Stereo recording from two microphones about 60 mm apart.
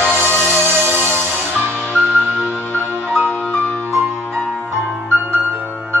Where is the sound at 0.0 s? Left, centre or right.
Right.